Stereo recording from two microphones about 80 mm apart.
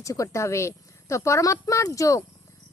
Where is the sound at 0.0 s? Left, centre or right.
Left.